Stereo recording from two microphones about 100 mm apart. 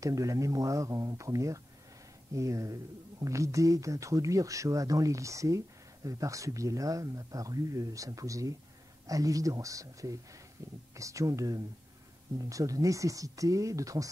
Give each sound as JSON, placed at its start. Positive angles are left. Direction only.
{"t": 0.0, "sound": "speech", "side_deg": -35}